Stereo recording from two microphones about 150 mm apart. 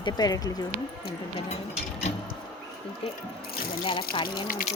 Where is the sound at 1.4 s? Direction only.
45° left (ahead or behind).